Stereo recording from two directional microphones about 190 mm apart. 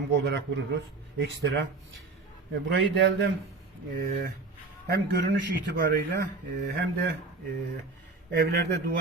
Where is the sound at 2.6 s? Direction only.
70° right (ahead or behind).